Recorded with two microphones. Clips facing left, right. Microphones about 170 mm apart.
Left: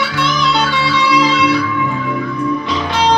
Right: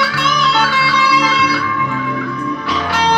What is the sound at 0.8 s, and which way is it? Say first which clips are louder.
Guitar: left 2 dB; 20° left (ahead or behind).